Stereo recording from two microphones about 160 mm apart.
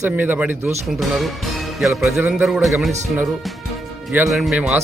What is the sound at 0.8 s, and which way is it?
Speech, centre (ahead or behind).